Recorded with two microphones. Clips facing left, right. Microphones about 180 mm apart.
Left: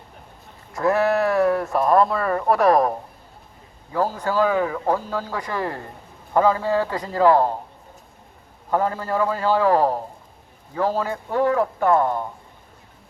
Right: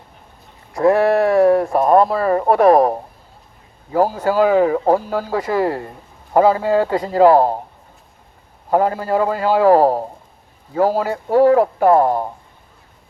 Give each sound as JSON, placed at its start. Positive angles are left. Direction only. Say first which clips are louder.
{"t": 0.8, "sound": "speech", "louder": "right 6 dB", "side_deg": -30}
{"t": 4.3, "sound": "speech", "louder": "right 7 dB", "side_deg": -40}
{"t": 8.7, "sound": "speech", "louder": "right 6 dB", "side_deg": -40}